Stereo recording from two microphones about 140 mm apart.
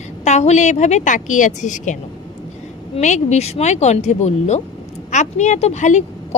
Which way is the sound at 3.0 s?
60° left (ahead or behind).